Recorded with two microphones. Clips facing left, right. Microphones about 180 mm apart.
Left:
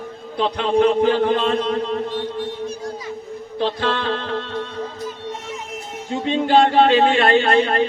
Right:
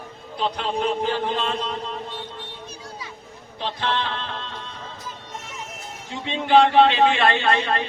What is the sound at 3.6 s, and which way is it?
Music, 50° left (ahead or behind).